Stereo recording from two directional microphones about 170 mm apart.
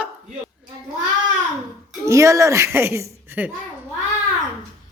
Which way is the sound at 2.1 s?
20° right (ahead or behind).